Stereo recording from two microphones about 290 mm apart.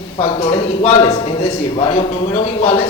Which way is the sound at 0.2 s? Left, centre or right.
Centre.